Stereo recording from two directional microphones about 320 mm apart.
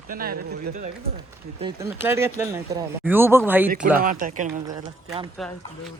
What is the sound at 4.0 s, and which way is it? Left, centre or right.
Speech, right.